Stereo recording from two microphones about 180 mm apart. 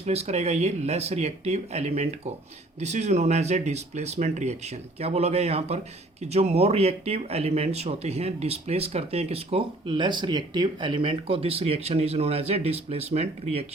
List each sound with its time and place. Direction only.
0.0 s speech: 35° right (ahead or behind)